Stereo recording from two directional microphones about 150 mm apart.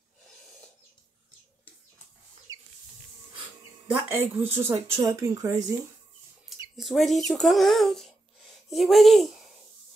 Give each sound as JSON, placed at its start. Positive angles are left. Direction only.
{"t": 2.5, "sound": "a sound", "side_deg": -25}
{"t": 3.9, "sound": "speech", "side_deg": -15}
{"t": 6.8, "sound": "a child's voice", "side_deg": 0}